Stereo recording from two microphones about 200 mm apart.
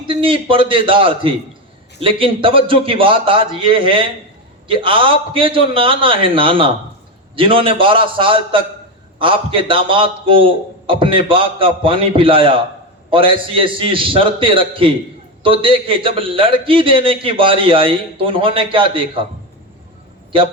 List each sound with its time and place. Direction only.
0.0 s a man's voice: 25° right (ahead or behind)